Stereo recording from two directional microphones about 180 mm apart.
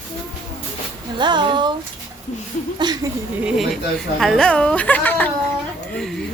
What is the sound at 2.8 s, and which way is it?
Speech, 25° right (ahead or behind).